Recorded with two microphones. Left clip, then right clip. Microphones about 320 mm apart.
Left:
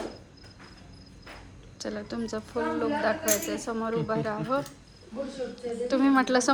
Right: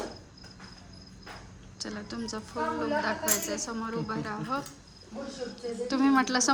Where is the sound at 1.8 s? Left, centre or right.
Centre.